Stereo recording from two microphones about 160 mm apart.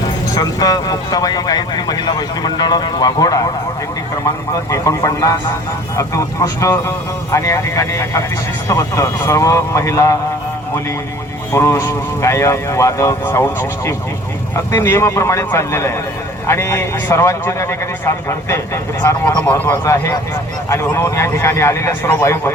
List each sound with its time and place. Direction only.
0.3 s speech: 25° left (ahead or behind)
4.7 s speech: 20° left (ahead or behind)
11.5 s a man's voice: 20° left (ahead or behind)